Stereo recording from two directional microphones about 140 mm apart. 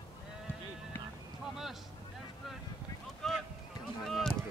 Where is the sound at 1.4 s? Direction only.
Centre (ahead or behind).